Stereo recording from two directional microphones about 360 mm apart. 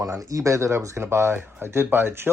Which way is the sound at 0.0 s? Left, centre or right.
Centre.